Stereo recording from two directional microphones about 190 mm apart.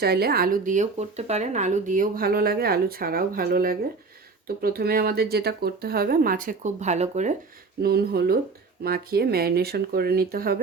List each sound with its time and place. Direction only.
0.0 s speech: 55° right (ahead or behind); by 7.3 s 40° right (ahead or behind)
7.8 s speech: 55° right (ahead or behind)